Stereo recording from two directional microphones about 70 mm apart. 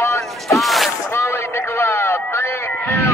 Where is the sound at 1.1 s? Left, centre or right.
Left.